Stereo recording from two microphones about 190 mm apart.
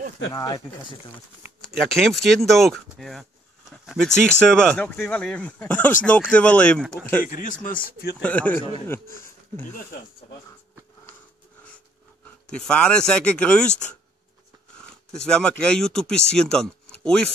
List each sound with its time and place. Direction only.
0.3 s speech: 20° left (ahead or behind)
1.8 s speech: centre (ahead or behind)
7.2 s speech: 45° left (ahead or behind)
8.2 s speech: 5° left (ahead or behind)
12.4 s speech: 5° left (ahead or behind)
15.1 s speech: 5° left (ahead or behind)